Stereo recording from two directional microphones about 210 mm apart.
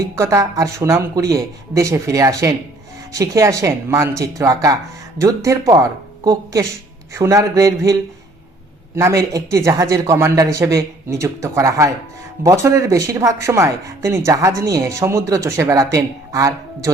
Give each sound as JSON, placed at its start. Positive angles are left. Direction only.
{"t": 0.2, "sound": "speech", "side_deg": -15}
{"t": 9.0, "sound": "speech", "side_deg": -15}